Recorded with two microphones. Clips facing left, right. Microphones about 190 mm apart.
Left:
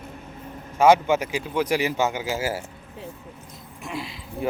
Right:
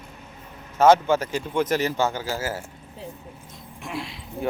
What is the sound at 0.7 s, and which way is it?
Speech, 15° left (ahead or behind).